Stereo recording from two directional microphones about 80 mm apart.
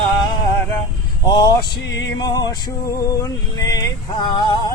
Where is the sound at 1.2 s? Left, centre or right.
Left.